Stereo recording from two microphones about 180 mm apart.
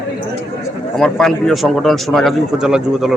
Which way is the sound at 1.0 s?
Centre (ahead or behind).